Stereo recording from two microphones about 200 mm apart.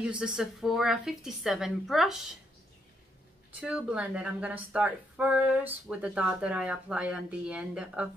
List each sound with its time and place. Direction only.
0.0 s a woman's voice: 5° right (ahead or behind)
3.6 s speech: 5° right (ahead or behind)